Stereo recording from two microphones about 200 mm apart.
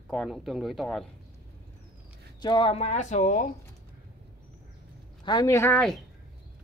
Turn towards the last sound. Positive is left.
turn(degrees=5)  # may be behind; listen again after turning